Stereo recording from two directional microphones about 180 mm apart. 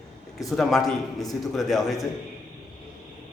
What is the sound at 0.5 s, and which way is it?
Speech, centre (ahead or behind).